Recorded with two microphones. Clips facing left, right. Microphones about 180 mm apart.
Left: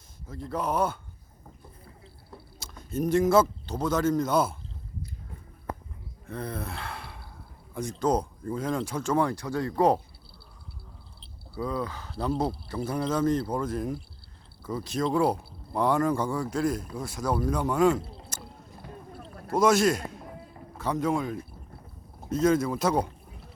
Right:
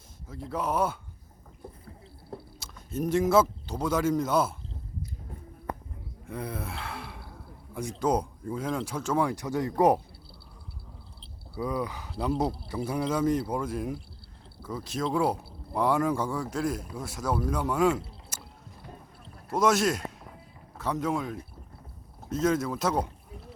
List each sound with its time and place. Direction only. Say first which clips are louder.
0.3 s speech: left 1 dB; 5° right (ahead or behind)
2.6 s speech: left 3 dB; 5° right (ahead or behind)
6.2 s gasp: left 1 dB; 10° right (ahead or behind)
7.7 s speech: left 1 dB; 10° right (ahead or behind)
9.3 s speech: even; 20° right (ahead or behind)
11.5 s speech: even; 15° right (ahead or behind)
19.5 s a man's voice: left 2 dB; centre (ahead or behind)